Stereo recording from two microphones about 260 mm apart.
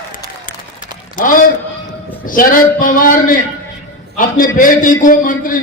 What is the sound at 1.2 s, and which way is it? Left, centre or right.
A man's voice, left.